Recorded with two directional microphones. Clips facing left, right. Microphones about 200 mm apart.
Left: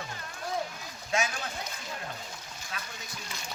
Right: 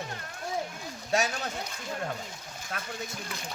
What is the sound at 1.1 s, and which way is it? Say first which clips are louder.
Speech: right 3 dB; 40° right (ahead or behind).